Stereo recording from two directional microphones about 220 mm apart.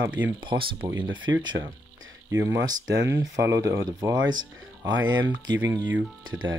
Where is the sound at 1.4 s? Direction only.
20° right (ahead or behind).